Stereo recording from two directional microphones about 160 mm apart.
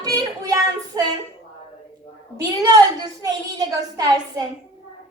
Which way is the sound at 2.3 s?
20° right (ahead or behind).